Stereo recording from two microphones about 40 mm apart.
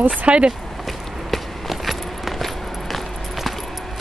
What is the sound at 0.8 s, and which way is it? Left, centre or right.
Walk, centre.